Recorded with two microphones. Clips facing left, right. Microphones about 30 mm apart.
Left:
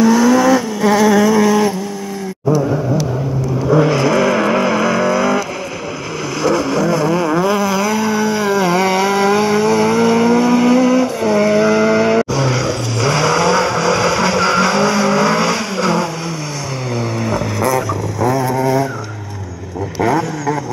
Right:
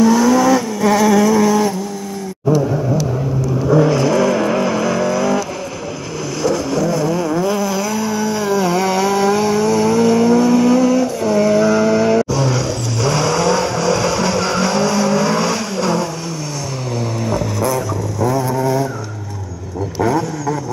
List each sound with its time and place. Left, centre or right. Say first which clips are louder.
0.0 s vehicle: left 1 dB; centre
3.7 s vehicle: left 1 dB; left
6.4 s vehicle: left 2 dB; left
17.2 s vehicle: left 1 dB; left
20.0 s vehicle: left 1 dB; centre